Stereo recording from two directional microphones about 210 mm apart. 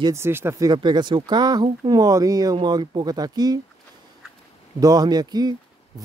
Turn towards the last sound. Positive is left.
turn(degrees=-20)  # may be behind; listen again after turning